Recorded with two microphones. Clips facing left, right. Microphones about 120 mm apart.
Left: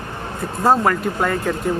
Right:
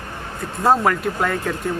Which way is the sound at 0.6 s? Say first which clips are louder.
Left 1 dB; centre (ahead or behind).